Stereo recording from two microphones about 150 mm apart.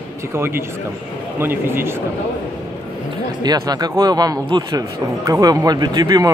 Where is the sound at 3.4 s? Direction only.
25° right (ahead or behind).